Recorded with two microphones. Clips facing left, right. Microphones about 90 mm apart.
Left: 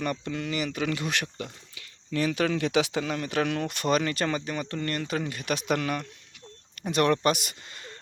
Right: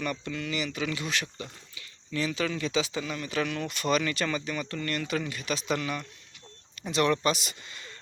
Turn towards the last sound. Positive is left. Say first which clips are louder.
# even
turn(degrees=45)  # may be behind; listen again after turning